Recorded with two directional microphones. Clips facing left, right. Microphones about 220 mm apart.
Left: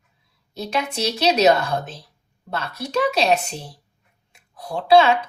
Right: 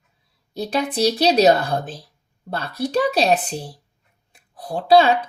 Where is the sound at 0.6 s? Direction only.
35° right (ahead or behind).